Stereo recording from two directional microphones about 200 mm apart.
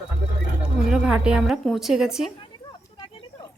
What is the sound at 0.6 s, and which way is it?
A woman's voice, 5° right (ahead or behind).